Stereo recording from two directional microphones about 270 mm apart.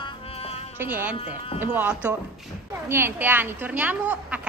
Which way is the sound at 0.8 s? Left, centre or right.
Centre.